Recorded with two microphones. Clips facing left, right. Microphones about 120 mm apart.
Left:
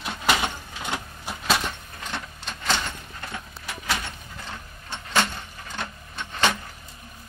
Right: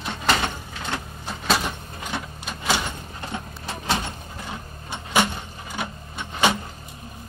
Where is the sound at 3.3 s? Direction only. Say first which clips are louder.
Right 5 dB; 25° right (ahead or behind).